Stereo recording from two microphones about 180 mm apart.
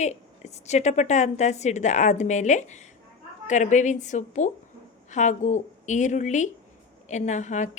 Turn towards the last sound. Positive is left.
turn(degrees=40)  # may be behind; listen again after turning